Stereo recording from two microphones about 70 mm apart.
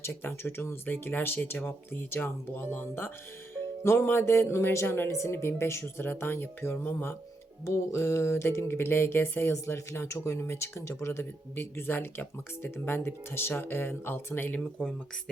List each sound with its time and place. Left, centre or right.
0.0 s music: left
7.6 s music: left
14.6 s speech: centre